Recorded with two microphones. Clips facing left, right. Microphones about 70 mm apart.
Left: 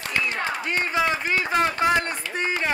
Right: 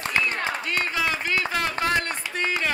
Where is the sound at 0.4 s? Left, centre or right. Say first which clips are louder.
Left 1 dB; left.